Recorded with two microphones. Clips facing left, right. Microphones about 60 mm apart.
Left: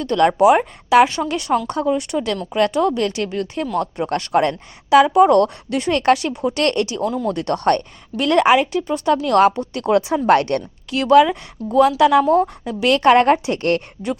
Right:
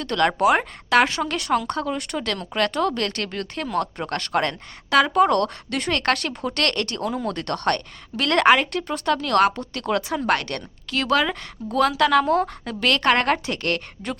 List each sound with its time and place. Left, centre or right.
0.0 s a woman's voice: centre
4.2 s speech: centre
8.1 s speech: centre
9.8 s speech: left
10.9 s speech: centre
11.6 s speech: centre
11.9 s speech: centre
12.3 s a woman's voice: right
12.9 s speech: centre
13.6 s speech: left